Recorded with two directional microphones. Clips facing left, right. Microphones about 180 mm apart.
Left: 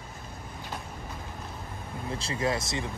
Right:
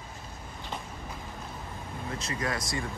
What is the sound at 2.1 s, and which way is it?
Speech, 30° left (ahead or behind).